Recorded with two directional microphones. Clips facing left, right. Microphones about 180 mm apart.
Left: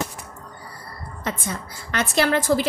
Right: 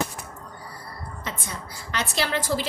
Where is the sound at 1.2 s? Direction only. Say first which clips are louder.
Left 7 dB; 50° left (ahead or behind).